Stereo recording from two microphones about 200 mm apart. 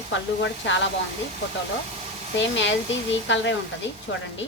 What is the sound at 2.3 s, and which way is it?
A woman's voice, 65° left (ahead or behind).